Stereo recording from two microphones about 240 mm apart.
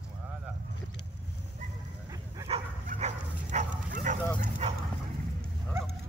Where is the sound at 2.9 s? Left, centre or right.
Right.